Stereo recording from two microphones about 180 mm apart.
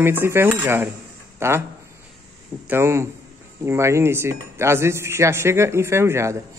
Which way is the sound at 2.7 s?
15° right (ahead or behind).